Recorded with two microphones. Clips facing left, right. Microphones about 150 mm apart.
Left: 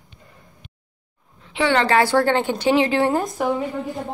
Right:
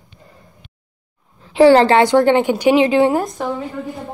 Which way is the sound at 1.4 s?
40° right (ahead or behind).